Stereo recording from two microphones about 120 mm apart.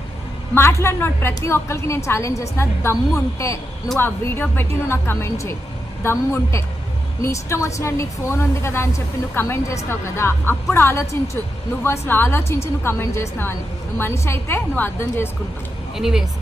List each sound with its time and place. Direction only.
0.6 s a woman's voice: 20° left (ahead or behind)
16.0 s speech: 5° right (ahead or behind)